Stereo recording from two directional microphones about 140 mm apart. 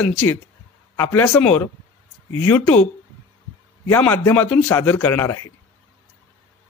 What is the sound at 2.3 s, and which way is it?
Speech, 15° left (ahead or behind).